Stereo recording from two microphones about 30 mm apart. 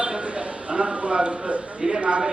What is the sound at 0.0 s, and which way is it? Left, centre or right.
A man's voice, right.